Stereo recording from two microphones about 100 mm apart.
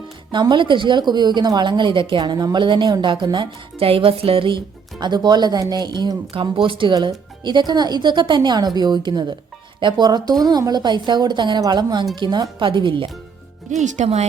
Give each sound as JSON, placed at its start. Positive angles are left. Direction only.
{"t": 0.3, "sound": "a woman's voice", "side_deg": -50}
{"t": 4.9, "sound": "a woman's voice", "side_deg": -45}
{"t": 6.3, "sound": "a woman's voice", "side_deg": -60}